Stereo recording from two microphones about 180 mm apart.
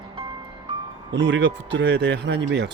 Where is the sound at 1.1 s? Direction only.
80° right.